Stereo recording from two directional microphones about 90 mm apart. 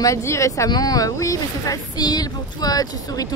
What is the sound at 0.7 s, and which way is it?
Speech, 45° left (ahead or behind).